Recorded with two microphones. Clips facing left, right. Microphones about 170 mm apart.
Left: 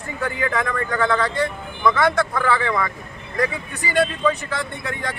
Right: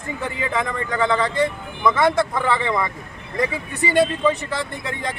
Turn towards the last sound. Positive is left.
turn(degrees=-25)  # may be behind; listen again after turning